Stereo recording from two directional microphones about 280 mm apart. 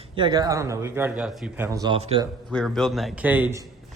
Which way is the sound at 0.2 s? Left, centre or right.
Centre.